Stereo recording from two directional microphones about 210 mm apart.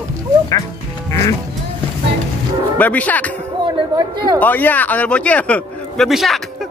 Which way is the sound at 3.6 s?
20° right (ahead or behind).